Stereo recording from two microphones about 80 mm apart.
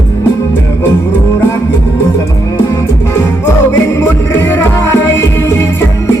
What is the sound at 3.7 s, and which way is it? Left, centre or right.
Music, left.